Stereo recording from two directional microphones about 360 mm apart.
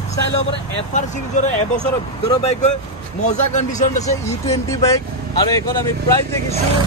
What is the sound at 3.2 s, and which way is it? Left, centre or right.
Speech, left.